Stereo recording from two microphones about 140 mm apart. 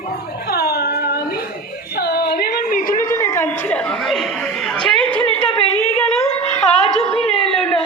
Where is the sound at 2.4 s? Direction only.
80° left.